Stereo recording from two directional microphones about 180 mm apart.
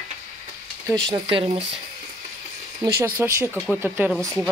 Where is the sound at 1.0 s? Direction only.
25° right (ahead or behind).